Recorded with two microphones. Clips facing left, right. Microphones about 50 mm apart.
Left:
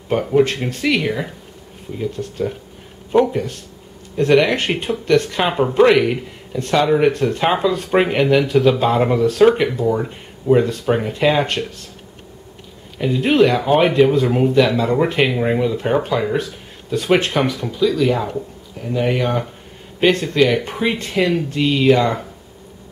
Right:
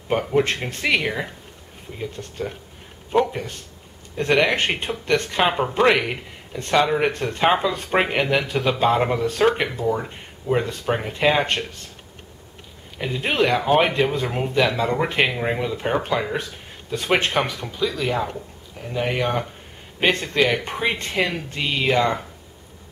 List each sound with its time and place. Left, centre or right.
0.1 s speech: centre
12.9 s speech: centre